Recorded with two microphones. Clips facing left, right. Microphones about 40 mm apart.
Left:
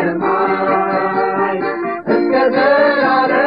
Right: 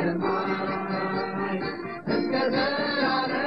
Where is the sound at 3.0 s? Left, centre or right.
Left.